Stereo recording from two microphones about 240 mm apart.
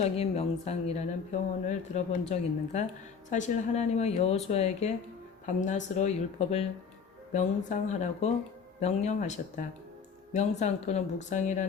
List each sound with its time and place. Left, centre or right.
0.0 s speech: left